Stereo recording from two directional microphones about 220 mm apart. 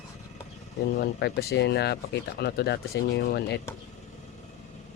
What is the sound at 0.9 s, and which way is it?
Speech, 45° left (ahead or behind).